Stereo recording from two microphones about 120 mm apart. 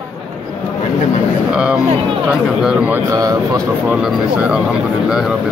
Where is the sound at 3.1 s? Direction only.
30° right (ahead or behind).